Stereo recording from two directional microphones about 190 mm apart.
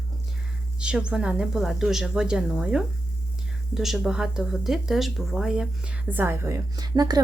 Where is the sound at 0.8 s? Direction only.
5° right (ahead or behind).